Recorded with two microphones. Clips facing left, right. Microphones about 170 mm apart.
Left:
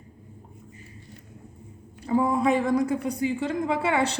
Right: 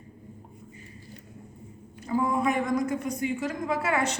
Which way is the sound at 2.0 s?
30° left (ahead or behind).